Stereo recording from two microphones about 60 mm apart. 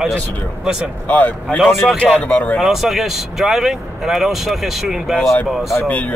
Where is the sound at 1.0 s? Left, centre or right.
Left.